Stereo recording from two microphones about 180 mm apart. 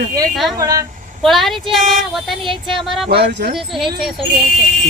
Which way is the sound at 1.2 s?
Centre (ahead or behind).